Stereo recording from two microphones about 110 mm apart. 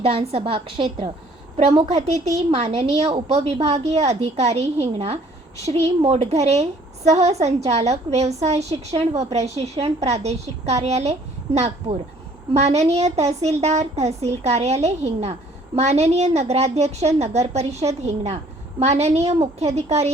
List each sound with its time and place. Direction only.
0.0 s a woman's voice: 65° right (ahead or behind); by 1.1 s 45° right (ahead or behind)
1.5 s a woman's voice: 80° right